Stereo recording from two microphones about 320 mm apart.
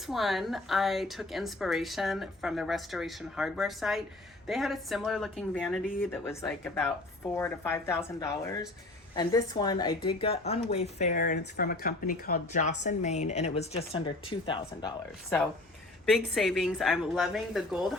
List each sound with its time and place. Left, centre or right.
0.1 s a woman's voice: centre
16.1 s a woman's voice: centre